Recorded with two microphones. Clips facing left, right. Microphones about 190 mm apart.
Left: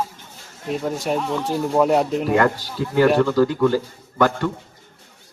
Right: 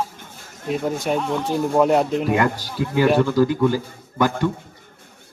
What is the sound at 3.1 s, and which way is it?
A man's voice, 10° right (ahead or behind).